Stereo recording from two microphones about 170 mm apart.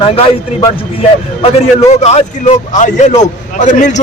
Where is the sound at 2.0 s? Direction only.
40° left (ahead or behind).